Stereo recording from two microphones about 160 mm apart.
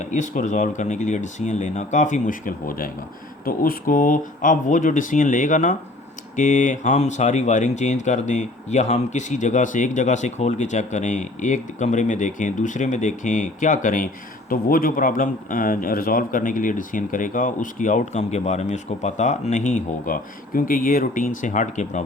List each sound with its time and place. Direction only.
0.0 s a man's voice: 50° left (ahead or behind)